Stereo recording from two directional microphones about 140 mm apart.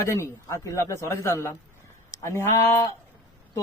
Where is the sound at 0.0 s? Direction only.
20° left (ahead or behind).